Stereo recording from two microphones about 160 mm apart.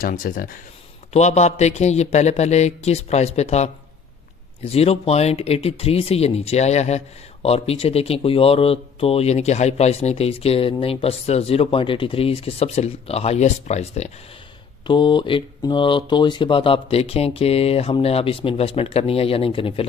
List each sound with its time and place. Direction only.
0.0 s speech: 60° left (ahead or behind)
1.1 s speech: 45° left (ahead or behind)
14.9 s speech: 30° left (ahead or behind)